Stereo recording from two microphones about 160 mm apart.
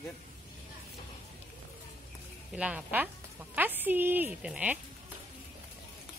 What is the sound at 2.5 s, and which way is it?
A woman's voice, 5° right (ahead or behind).